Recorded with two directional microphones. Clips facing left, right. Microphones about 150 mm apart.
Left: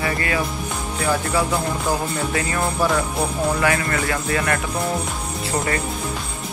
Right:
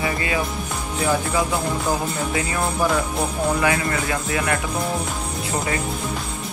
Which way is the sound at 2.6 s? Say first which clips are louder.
Left 1 dB; centre (ahead or behind).